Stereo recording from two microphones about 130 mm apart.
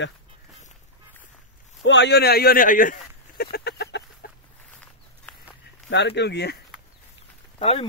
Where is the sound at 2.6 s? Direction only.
90° left.